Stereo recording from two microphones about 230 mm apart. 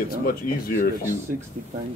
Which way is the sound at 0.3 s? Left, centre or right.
Left.